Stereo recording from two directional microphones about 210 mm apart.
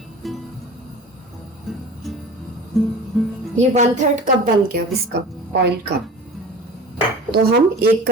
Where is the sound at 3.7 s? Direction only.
35° right (ahead or behind).